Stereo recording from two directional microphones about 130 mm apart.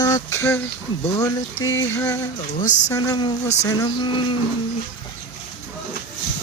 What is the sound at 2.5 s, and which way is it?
Speech, 80° left.